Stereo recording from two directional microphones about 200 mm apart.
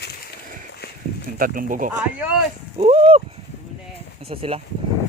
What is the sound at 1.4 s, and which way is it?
Speech, 45° right (ahead or behind).